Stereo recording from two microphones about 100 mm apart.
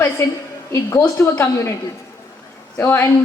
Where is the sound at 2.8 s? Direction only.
25° left (ahead or behind).